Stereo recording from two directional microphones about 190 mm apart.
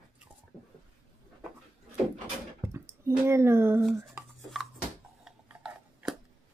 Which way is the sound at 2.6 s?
15° right (ahead or behind).